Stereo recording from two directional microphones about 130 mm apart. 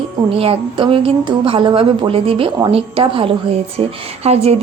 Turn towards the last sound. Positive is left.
turn(degrees=-55)  # may be behind; listen again after turning